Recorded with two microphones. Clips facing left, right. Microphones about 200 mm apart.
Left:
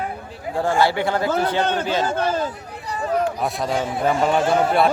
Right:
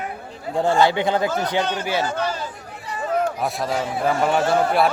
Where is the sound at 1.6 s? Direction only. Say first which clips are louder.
Left 3 dB; 55° left (ahead or behind).